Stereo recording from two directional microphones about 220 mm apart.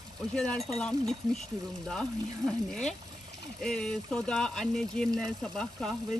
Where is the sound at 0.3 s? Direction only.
5° left (ahead or behind).